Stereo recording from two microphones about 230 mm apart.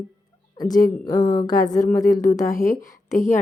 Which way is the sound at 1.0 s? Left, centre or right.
Centre.